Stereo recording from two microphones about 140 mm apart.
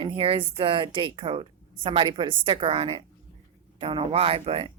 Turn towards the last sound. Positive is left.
turn(degrees=-40)  # may be behind; listen again after turning